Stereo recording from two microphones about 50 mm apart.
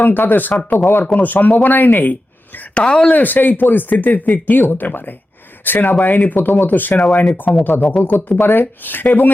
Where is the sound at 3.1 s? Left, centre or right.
Left.